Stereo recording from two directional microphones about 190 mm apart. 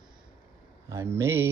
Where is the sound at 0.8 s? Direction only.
15° right (ahead or behind).